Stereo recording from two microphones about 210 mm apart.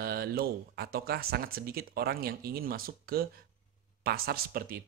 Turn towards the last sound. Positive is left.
turn(degrees=-45)  # may be behind; listen again after turning